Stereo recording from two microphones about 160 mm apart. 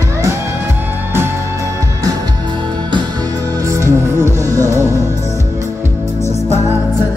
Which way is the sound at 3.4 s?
20° right (ahead or behind).